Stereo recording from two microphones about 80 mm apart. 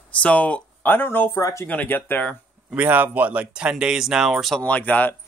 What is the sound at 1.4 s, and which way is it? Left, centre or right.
Speech, left.